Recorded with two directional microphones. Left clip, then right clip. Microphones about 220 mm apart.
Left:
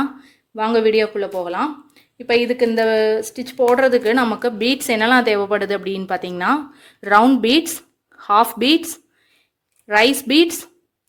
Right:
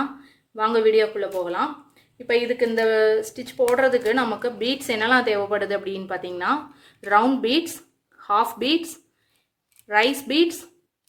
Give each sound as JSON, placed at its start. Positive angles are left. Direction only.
{"t": 0.0, "sound": "speech", "side_deg": 40}